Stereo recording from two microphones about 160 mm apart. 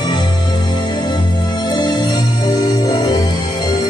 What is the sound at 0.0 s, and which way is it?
Music, 25° left (ahead or behind).